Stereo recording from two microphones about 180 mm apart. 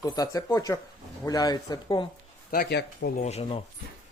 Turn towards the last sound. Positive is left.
turn(degrees=35)  # may be behind; listen again after turning